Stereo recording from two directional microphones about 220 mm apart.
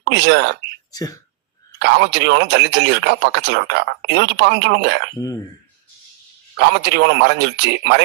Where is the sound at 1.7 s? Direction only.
50° right (ahead or behind).